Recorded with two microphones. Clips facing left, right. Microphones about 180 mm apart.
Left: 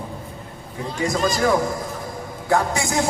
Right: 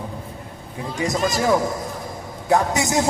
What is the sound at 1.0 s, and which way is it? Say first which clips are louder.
A man's voice: left 1 dB; 20° right (ahead or behind).